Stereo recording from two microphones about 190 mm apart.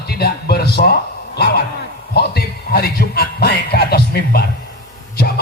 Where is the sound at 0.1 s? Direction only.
55° left (ahead or behind).